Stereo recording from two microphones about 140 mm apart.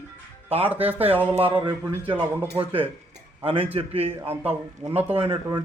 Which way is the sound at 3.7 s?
45° right (ahead or behind).